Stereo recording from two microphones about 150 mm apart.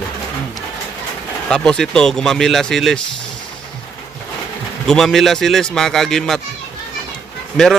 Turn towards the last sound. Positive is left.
turn(degrees=5)  # may be behind; listen again after turning